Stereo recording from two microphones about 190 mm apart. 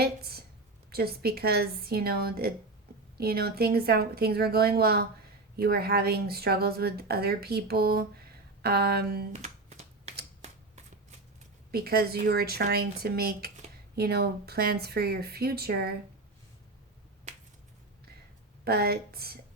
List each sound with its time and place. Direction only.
0.0 s a sound: 55° right (ahead or behind)
0.9 s speech: 55° right (ahead or behind)
9.3 s finger snapping: 35° right (ahead or behind)
11.7 s speech: 55° right (ahead or behind)
18.6 s speech: 55° right (ahead or behind)